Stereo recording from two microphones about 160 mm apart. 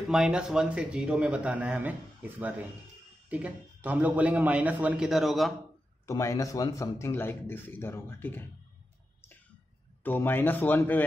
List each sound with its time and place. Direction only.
0.0 s a man's voice: 5° right (ahead or behind)
6.0 s a man's voice: 20° left (ahead or behind)
10.0 s a man's voice: 15° left (ahead or behind)